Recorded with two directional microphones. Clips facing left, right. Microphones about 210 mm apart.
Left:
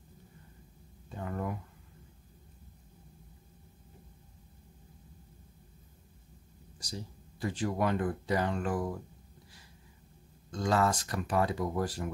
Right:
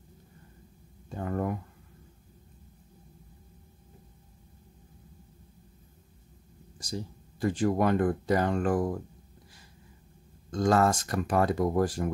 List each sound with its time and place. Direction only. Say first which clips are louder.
1.1 s speech: right 5 dB; 45° right (ahead or behind)
6.8 s speech: right 6 dB; 50° right (ahead or behind)
10.5 s speech: right 5 dB; 45° right (ahead or behind)